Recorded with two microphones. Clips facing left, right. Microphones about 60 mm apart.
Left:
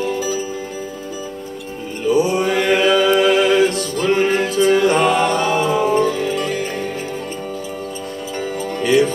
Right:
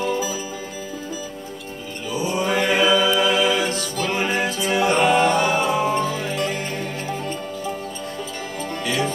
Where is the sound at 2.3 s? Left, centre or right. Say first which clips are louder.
Left 4 dB; left.